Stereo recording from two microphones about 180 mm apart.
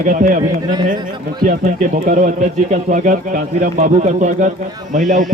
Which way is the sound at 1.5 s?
50° right (ahead or behind).